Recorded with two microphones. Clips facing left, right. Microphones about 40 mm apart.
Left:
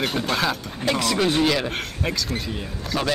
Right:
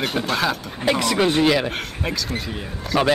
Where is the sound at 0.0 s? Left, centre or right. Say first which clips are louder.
Right 1 dB; centre.